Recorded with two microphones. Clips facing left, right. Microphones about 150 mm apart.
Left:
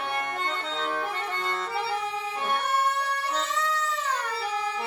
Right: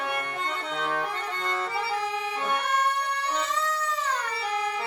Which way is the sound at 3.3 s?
Centre (ahead or behind).